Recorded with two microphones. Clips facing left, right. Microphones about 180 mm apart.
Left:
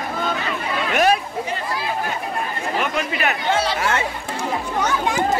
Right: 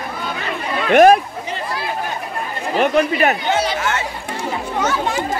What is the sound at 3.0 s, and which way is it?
Speech, 45° right (ahead or behind).